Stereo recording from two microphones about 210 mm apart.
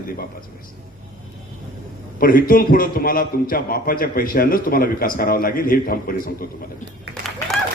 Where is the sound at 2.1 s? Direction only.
40° left (ahead or behind).